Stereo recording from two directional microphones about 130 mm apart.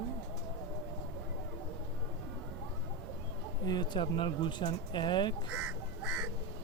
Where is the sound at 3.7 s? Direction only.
35° left (ahead or behind).